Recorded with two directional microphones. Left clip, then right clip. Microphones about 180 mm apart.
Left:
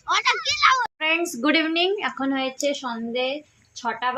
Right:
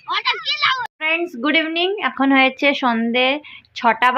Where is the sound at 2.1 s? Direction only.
25° right (ahead or behind).